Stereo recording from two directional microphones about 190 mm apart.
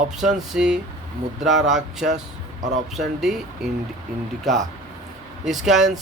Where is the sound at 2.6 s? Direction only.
40° right (ahead or behind).